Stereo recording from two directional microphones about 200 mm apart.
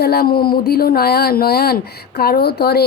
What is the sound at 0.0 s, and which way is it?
A woman's voice, 50° left (ahead or behind).